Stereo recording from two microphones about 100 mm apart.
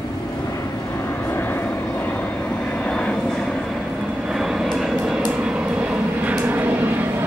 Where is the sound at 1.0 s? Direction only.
20° left (ahead or behind).